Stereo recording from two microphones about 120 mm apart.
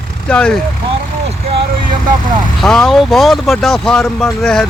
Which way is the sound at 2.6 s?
5° left (ahead or behind).